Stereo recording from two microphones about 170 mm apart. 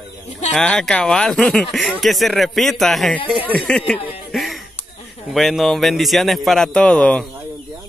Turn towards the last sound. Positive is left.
turn(degrees=5)  # may be behind; listen again after turning